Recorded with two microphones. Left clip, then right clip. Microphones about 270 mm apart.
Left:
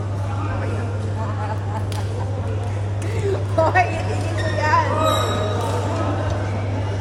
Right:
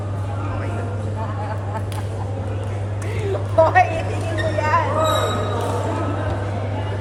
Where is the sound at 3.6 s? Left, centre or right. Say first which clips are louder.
Right 4 dB; left.